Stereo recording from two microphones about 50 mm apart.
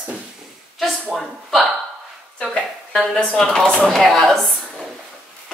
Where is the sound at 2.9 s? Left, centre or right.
Centre.